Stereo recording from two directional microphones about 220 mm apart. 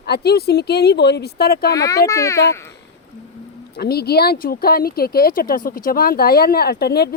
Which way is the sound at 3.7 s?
45° left (ahead or behind).